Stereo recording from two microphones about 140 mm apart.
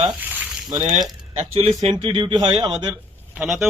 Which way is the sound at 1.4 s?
45° right (ahead or behind).